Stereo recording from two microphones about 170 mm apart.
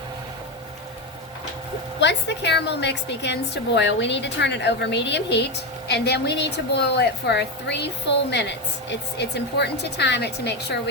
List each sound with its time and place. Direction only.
2.0 s a woman's voice: 90° left
5.9 s a woman's voice: 80° left